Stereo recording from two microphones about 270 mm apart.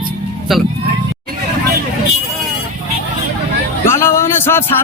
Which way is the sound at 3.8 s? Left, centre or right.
Centre.